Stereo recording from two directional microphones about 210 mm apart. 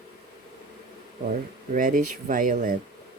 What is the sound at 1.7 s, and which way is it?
Speech, 40° right (ahead or behind).